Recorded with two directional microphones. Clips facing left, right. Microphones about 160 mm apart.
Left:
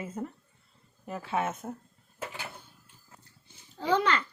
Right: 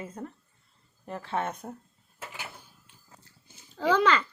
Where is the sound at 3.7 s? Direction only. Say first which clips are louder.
Right 3 dB; 90° right.